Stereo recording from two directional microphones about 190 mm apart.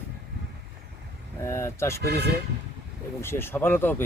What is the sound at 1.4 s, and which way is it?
Speech, 15° left (ahead or behind).